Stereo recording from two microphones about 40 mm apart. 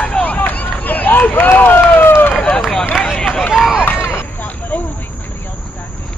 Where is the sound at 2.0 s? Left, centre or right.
Left.